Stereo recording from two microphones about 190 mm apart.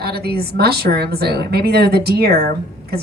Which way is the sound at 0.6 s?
55° right (ahead or behind).